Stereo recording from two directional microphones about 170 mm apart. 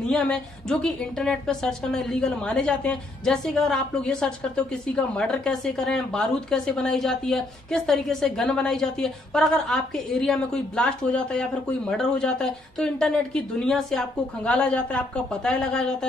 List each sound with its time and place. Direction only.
0.0 s a woman's voice: 5° left (ahead or behind)